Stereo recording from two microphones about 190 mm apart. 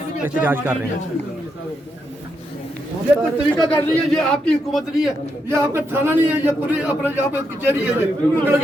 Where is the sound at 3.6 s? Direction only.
25° left (ahead or behind).